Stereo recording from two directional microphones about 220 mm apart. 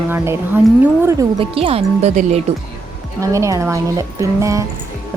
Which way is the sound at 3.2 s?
15° right (ahead or behind).